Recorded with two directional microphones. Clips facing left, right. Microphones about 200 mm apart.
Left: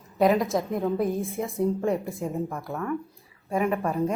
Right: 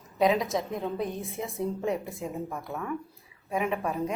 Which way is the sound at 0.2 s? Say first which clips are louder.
Left 3 dB; centre (ahead or behind).